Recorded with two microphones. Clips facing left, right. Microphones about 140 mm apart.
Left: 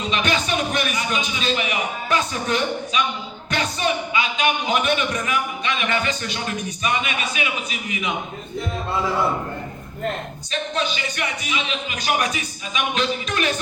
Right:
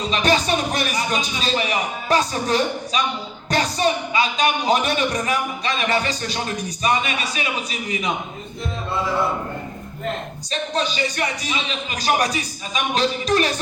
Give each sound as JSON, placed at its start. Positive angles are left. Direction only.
{"t": 0.0, "sound": "a man's voice", "side_deg": -35}
{"t": 10.5, "sound": "a man's voice", "side_deg": -35}